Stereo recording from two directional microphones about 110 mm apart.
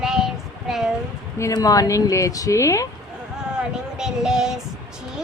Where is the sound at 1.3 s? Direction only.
30° left (ahead or behind).